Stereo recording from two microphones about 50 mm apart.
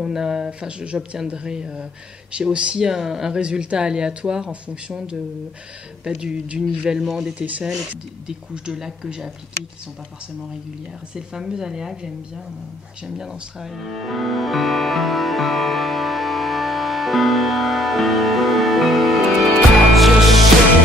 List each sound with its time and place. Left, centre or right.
0.0 s a woman's voice: centre
0.5 s a woman's voice: right
3.3 s speech: centre
6.9 s a woman's voice: centre
7.3 s speech: right
7.9 s a woman's voice: centre
11.1 s a woman's voice: centre
13.0 s music: centre